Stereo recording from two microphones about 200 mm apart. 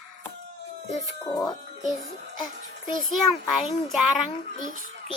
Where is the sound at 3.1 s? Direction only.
Centre (ahead or behind).